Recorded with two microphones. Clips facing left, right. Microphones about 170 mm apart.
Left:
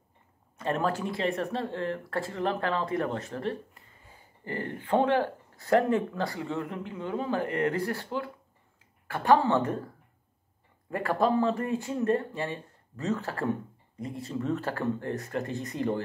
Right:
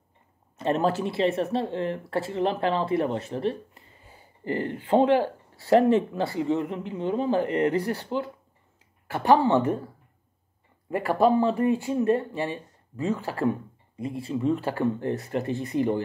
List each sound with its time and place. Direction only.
0.6 s speech: 25° right (ahead or behind)
10.9 s speech: 20° right (ahead or behind)